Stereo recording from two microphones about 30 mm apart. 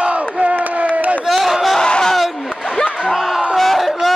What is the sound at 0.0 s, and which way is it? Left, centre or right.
Crowd, right.